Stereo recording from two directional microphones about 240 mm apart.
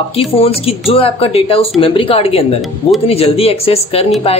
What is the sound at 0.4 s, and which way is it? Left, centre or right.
Speech, left.